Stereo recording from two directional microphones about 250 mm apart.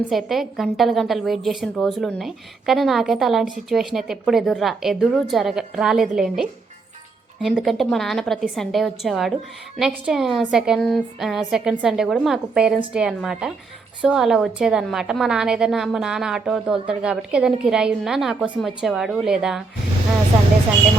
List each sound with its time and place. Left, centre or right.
0.1 s a woman's voice: centre